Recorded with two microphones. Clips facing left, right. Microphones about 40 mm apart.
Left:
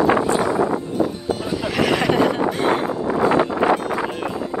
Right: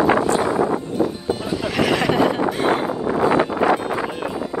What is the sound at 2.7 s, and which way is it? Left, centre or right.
Wind noise, centre.